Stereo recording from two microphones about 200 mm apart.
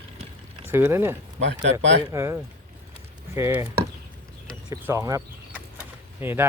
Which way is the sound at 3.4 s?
15° right (ahead or behind).